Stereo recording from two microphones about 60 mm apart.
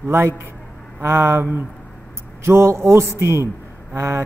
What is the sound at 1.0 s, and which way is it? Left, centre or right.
Speech, right.